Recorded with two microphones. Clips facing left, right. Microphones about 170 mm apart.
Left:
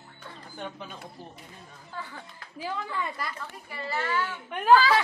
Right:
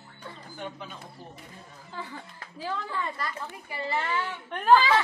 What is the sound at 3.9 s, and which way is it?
Speech, 25° right (ahead or behind).